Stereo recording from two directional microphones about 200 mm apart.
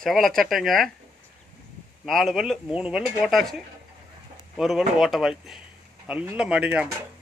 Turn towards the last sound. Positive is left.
turn(degrees=-5)  # may be behind; listen again after turning